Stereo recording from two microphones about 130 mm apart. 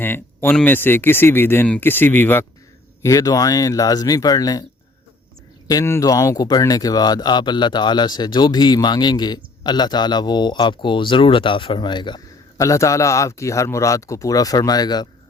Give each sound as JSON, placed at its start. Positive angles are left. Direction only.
{"t": 0.0, "sound": "speech", "side_deg": 15}
{"t": 3.0, "sound": "a man's voice", "side_deg": 25}
{"t": 5.6, "sound": "speech", "side_deg": 25}
{"t": 12.5, "sound": "a man's voice", "side_deg": 25}